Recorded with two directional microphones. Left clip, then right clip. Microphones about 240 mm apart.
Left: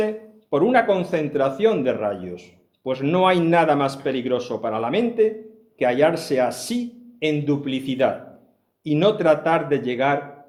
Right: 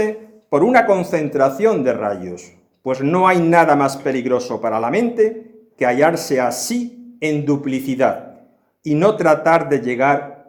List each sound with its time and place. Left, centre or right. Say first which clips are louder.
0.5 s a man's voice: right 5 dB; right